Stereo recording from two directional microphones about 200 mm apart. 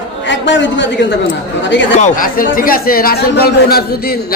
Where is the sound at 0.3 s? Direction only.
65° left (ahead or behind).